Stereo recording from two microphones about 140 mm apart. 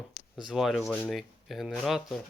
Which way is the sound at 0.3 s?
Centre (ahead or behind).